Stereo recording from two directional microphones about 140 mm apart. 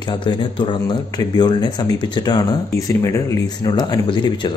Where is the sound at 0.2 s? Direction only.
35° left (ahead or behind).